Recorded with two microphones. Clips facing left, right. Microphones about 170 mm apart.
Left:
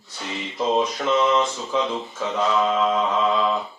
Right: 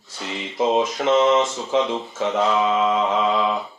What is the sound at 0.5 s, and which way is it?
Speech, 20° right (ahead or behind).